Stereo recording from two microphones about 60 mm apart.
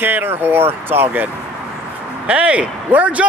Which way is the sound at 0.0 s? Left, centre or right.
Right.